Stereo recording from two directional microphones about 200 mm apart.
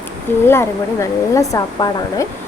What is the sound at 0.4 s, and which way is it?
Speech, 10° left (ahead or behind).